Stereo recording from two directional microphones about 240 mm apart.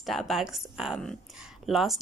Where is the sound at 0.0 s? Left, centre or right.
Centre.